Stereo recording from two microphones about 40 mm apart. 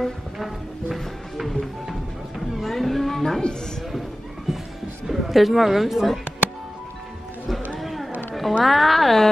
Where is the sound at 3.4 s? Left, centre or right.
Centre.